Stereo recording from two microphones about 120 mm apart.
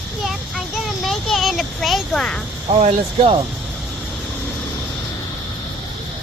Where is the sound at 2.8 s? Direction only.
55° right (ahead or behind).